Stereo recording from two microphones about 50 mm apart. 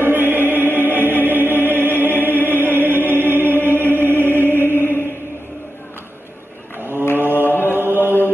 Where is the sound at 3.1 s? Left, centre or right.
Right.